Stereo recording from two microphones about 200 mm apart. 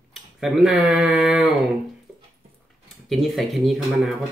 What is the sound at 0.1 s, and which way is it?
Tick-tock, centre (ahead or behind).